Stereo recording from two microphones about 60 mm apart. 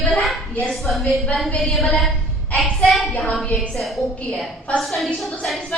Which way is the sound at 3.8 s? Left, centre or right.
Centre.